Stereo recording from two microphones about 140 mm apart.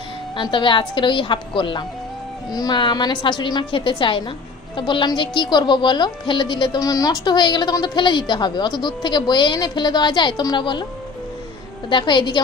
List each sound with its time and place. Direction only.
0.4 s speech: 35° left (ahead or behind)
11.9 s speech: 35° left (ahead or behind)